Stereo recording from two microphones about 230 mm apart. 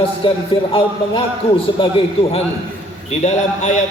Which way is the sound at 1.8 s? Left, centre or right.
Left.